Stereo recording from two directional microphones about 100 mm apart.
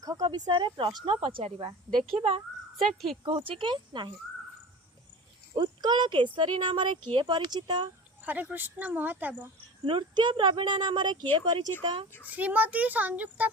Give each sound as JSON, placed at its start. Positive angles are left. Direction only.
{"t": 0.0, "sound": "speech", "side_deg": -40}
{"t": 2.1, "sound": "a child's voice", "side_deg": -90}
{"t": 2.8, "sound": "speech", "side_deg": 0}
{"t": 3.2, "sound": "speech", "side_deg": -65}
{"t": 5.5, "sound": "speech", "side_deg": -45}
{"t": 8.2, "sound": "speech", "side_deg": -15}
{"t": 9.8, "sound": "speech", "side_deg": -55}
{"t": 12.3, "sound": "speech", "side_deg": -15}